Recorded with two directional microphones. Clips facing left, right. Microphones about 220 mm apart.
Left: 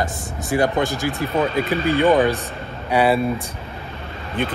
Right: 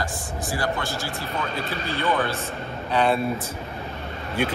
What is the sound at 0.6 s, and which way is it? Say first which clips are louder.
Speech: left 9 dB; 15° left (ahead or behind).